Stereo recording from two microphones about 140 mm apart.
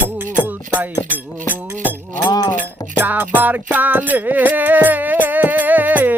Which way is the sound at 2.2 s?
30° left (ahead or behind).